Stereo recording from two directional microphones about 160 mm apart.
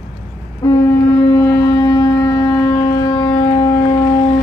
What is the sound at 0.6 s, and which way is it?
Wind instrument, 20° left (ahead or behind).